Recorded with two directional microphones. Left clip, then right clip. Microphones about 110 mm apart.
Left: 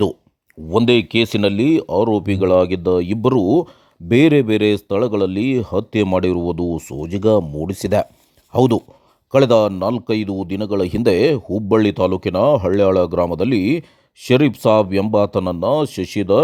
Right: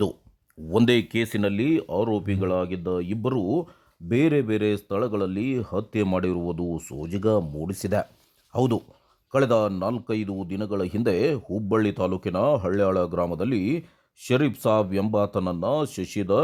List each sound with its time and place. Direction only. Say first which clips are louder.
0.9 s speech: left 8 dB; 10° left (ahead or behind)
1.2 s speech: left 9 dB; 25° left (ahead or behind); by 3.7 s 55° left (ahead or behind)
4.1 s speech: left 9 dB; 45° left (ahead or behind)